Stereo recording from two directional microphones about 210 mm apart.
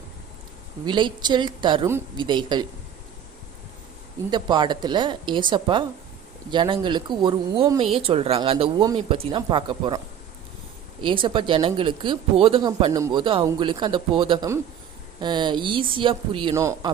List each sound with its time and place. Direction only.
0.9 s speech: 20° right (ahead or behind)
4.3 s speech: 20° right (ahead or behind)
11.0 s speech: 25° right (ahead or behind)